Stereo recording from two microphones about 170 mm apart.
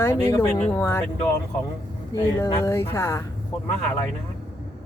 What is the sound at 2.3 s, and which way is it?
Speech, 15° left (ahead or behind).